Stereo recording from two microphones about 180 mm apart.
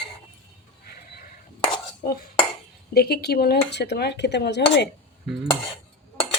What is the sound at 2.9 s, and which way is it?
Speech, 60° left (ahead or behind).